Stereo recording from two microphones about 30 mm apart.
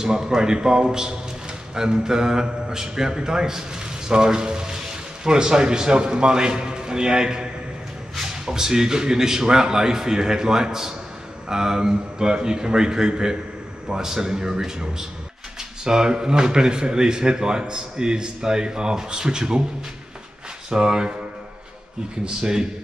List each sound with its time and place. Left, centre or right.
0.0 s speech: right
20.7 s speech: right
22.4 s speech: right